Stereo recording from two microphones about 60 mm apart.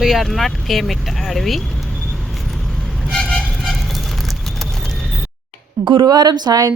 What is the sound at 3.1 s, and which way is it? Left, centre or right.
Vehicle, centre.